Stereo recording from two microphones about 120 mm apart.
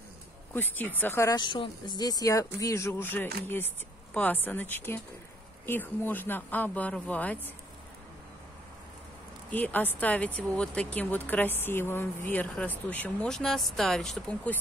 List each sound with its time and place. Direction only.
0.5 s speech: 15° left (ahead or behind)
1.3 s speech: 40° left (ahead or behind); by 7.3 s 10° left (ahead or behind)
9.5 s speech: 15° left (ahead or behind)